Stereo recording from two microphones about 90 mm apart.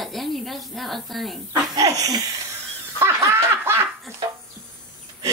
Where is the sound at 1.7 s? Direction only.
40° right (ahead or behind).